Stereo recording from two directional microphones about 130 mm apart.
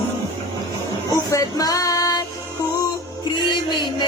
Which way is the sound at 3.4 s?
35° left (ahead or behind).